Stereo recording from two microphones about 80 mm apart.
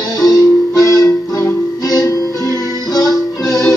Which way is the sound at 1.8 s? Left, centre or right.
Left.